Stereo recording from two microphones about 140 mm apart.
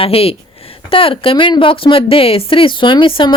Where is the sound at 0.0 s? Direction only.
45° left (ahead or behind).